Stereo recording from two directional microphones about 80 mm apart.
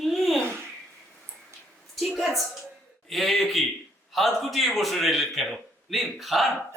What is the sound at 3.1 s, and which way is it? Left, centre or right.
A man's voice, centre.